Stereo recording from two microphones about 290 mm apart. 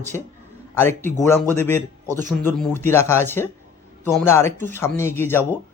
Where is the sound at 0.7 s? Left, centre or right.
Centre.